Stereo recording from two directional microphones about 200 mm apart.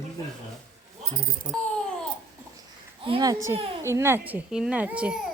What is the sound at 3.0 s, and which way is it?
A woman's voice, 20° right (ahead or behind).